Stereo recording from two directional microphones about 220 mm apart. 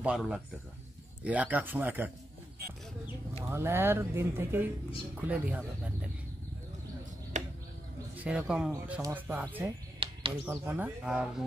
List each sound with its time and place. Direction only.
0.0 s speech: 5° right (ahead or behind)
3.4 s speech: 10° right (ahead or behind)
7.3 s a sound: 35° right (ahead or behind)
8.2 s speech: 5° right (ahead or behind)
10.0 s a sound: 25° right (ahead or behind)
10.4 s speech: 10° right (ahead or behind)